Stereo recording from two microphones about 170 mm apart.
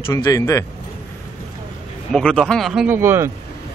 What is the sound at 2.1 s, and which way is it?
Speech, 5° left (ahead or behind).